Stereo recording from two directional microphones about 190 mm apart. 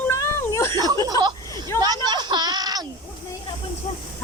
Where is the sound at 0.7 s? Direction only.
20° right (ahead or behind).